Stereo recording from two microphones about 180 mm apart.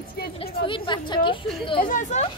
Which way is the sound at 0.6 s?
25° left (ahead or behind).